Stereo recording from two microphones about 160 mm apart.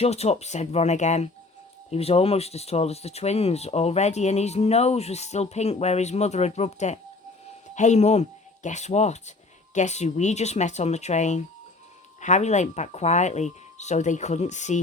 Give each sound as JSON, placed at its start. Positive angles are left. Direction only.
{"t": 0.0, "sound": "speech", "side_deg": 40}